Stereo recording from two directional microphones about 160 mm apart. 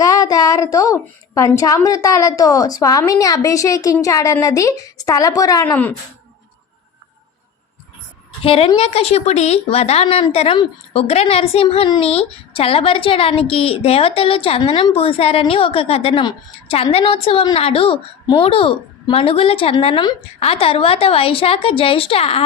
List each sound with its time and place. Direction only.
0.0 s a woman's voice: 20° left (ahead or behind)
8.4 s speech: 35° left (ahead or behind)